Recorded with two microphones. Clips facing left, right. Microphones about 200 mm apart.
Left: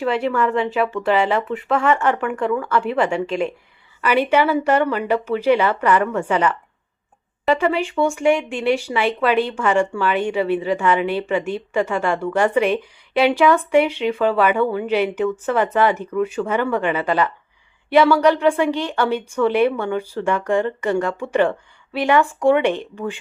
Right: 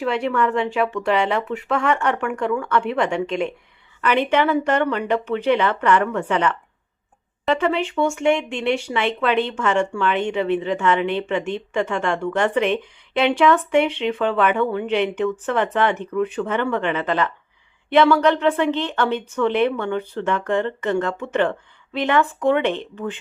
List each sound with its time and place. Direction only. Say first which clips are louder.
0.0 s a woman's voice: left 1 dB; centre (ahead or behind)